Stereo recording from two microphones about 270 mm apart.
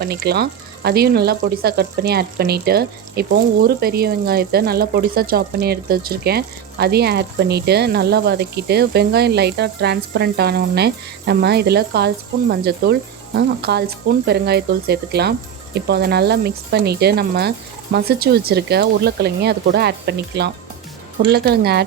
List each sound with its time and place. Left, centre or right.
0.0 s speech: right